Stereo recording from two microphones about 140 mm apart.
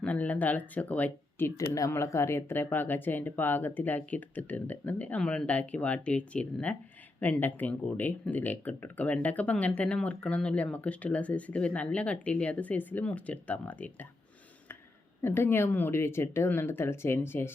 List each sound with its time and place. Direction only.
0.0 s speech: 10° left (ahead or behind)
15.2 s speech: 15° left (ahead or behind)